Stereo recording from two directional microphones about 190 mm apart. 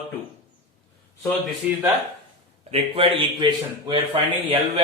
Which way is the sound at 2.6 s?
30° right (ahead or behind).